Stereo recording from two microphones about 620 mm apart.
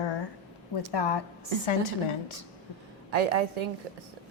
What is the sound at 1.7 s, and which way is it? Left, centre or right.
Speech, left.